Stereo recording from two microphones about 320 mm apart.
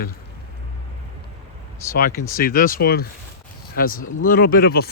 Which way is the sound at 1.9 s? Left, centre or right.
Left.